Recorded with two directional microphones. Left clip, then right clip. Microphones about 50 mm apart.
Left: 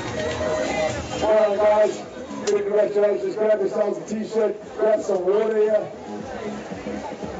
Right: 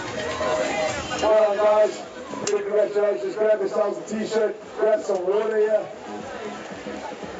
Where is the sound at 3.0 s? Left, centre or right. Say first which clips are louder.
Left 2 dB; right.